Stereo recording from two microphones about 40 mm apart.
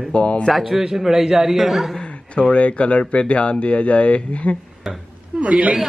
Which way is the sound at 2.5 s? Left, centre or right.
Left.